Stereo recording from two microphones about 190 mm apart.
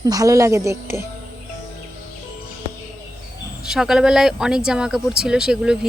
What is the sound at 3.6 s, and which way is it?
Speech, 5° right (ahead or behind).